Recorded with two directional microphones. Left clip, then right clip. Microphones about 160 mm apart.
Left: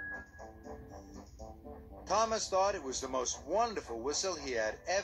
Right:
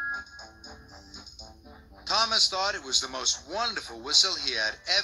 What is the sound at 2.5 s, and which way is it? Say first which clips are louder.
Speech: right 4 dB; 45° right (ahead or behind).